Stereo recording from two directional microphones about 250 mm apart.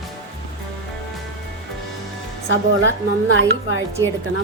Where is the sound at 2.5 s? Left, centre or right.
Right.